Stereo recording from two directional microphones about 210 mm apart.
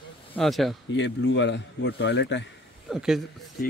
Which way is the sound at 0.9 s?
60° left (ahead or behind).